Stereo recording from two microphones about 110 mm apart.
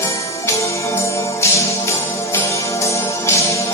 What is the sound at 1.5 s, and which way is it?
Music, 25° left (ahead or behind).